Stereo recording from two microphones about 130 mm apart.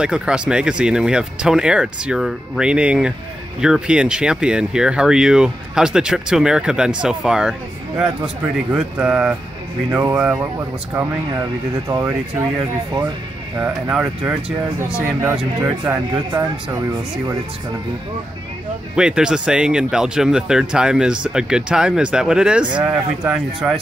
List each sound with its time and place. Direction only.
0.0 s speech: 5° right (ahead or behind)
8.7 s speech: 10° right (ahead or behind)
11.9 s speech: 20° right (ahead or behind)
13.6 s speech: 10° right (ahead or behind)
18.9 s speech: 5° right (ahead or behind)